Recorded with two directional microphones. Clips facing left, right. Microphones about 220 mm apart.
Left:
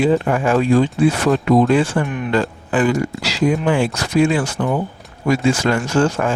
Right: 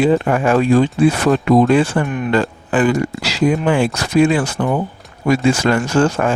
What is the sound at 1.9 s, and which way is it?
Speech, 60° right (ahead or behind).